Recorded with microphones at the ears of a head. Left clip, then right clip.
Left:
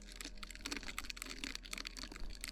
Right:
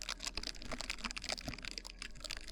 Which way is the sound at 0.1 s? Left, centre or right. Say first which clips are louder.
Right 6 dB; right.